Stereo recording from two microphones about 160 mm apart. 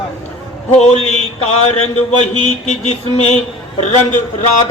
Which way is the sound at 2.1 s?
40° left (ahead or behind).